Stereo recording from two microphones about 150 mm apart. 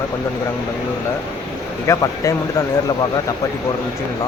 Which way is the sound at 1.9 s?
20° left (ahead or behind).